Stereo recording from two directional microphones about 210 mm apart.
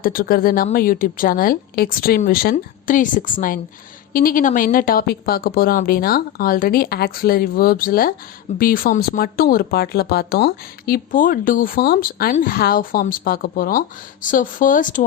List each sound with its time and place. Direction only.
0.0 s speech: 45° left (ahead or behind)